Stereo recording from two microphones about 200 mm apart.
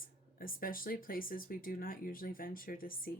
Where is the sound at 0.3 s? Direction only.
45° left (ahead or behind).